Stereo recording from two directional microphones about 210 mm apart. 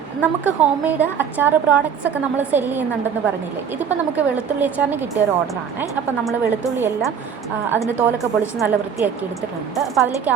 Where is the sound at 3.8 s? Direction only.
5° right (ahead or behind).